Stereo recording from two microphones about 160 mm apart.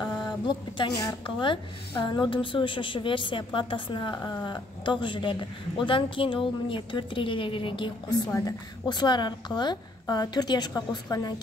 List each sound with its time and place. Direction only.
0.0 s a woman's voice: 30° left (ahead or behind)
8.3 s a woman's voice: 20° left (ahead or behind)